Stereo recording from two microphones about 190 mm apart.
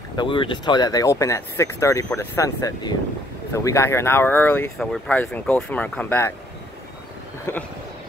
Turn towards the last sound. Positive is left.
turn(degrees=15)  # may be behind; listen again after turning